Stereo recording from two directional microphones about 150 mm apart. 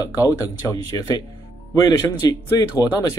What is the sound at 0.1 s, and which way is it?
Speech, 20° left (ahead or behind).